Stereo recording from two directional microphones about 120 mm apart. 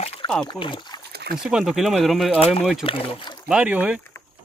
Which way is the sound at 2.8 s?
50° left (ahead or behind).